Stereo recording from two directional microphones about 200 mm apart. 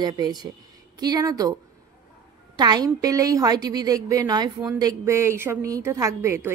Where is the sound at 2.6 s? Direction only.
20° right (ahead or behind).